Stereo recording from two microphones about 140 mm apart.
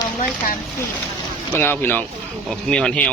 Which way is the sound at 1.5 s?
15° left (ahead or behind).